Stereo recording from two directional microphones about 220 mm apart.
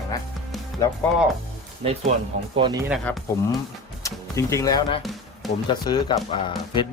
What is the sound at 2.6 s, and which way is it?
Speech, 25° right (ahead or behind).